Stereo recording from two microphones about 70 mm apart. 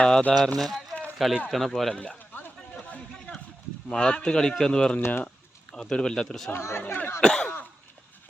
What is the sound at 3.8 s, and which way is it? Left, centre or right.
Speech, centre.